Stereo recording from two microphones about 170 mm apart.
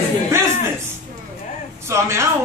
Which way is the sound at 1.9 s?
15° right (ahead or behind).